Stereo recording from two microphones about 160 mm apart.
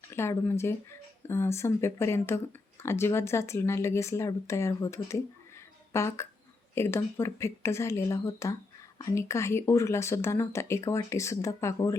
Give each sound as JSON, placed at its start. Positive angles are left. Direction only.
{"t": 0.1, "sound": "speech", "side_deg": 15}